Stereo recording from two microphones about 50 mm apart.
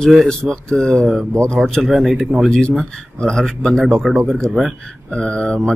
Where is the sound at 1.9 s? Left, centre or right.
Centre.